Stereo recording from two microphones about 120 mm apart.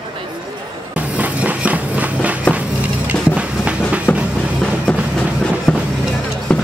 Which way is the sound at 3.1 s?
10° right (ahead or behind).